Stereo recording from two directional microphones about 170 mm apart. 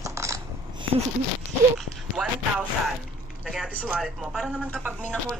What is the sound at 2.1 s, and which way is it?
Speech, 5° right (ahead or behind).